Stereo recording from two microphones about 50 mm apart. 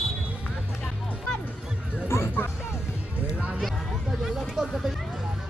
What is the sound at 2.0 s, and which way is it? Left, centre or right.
Music, left.